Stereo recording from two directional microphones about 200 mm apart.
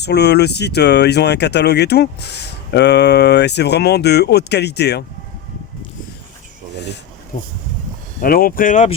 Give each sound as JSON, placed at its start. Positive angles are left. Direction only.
{"t": 0.0, "sound": "speech", "side_deg": 55}
{"t": 8.2, "sound": "speech", "side_deg": 45}